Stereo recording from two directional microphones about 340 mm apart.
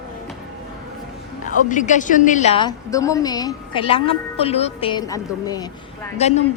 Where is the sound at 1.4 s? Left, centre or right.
Left.